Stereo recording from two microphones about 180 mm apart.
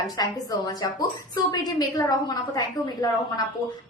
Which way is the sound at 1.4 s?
20° left (ahead or behind).